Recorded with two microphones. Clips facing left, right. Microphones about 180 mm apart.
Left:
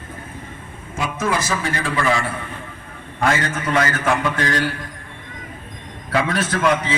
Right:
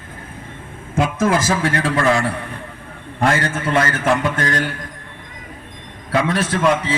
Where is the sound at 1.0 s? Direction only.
50° right (ahead or behind).